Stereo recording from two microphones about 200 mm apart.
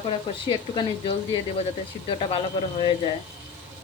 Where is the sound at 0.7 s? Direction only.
25° left (ahead or behind).